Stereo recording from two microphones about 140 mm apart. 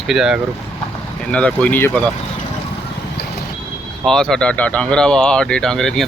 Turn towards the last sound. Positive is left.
turn(degrees=5)  # may be behind; listen again after turning